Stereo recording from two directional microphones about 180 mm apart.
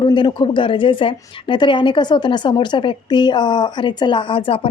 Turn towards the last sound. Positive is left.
turn(degrees=30)  # may be behind; listen again after turning